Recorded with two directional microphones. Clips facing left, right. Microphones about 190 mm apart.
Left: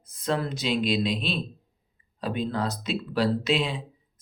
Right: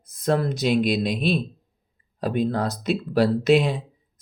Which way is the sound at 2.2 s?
50° right (ahead or behind).